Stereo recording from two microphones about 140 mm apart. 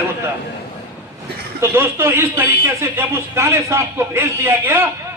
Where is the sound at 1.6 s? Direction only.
15° right (ahead or behind).